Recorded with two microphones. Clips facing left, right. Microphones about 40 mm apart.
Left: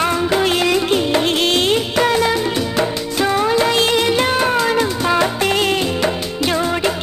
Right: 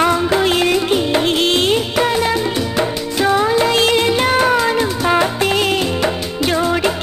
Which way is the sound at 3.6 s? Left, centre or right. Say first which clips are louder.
Right 1 dB; right.